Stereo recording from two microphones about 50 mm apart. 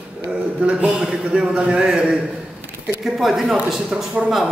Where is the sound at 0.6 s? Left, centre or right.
Right.